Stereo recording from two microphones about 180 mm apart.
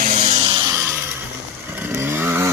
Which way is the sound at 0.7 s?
15° right (ahead or behind).